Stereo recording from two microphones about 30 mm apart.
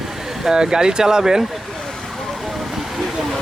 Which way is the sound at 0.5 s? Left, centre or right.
Right.